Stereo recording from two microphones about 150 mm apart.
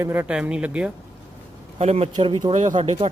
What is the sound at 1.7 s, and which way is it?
Speech, 45° right (ahead or behind).